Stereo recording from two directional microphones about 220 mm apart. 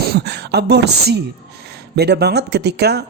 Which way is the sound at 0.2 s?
50° right (ahead or behind).